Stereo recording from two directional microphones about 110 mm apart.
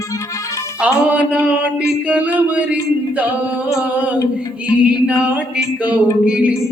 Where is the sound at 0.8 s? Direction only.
15° right (ahead or behind).